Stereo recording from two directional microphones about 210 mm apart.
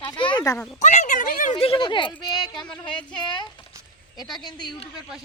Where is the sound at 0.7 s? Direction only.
35° left (ahead or behind).